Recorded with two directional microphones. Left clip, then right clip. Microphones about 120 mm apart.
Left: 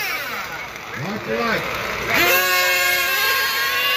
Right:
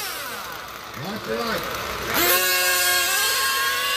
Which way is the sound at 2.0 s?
Centre (ahead or behind).